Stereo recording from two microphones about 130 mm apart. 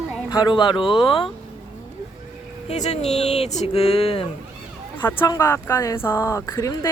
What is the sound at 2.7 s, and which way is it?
Speech, 60° left (ahead or behind).